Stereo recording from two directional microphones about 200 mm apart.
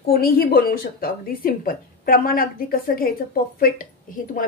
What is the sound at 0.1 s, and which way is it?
A woman's voice, 50° left (ahead or behind).